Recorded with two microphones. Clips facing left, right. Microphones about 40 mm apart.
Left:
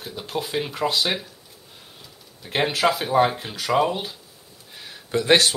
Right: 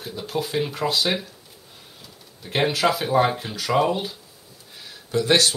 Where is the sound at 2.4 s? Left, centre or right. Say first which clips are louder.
Even; centre.